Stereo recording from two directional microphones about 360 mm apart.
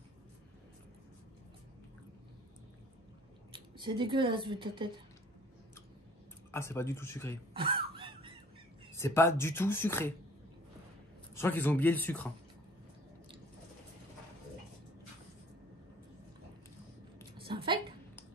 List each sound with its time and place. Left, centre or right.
3.5 s speech: centre
6.5 s speech: centre
7.5 s a sound: centre
8.9 s speech: centre
11.3 s a man's voice: centre
17.5 s a sound: centre